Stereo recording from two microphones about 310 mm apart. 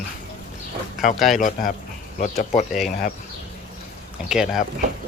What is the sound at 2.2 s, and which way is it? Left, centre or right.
Speech, left.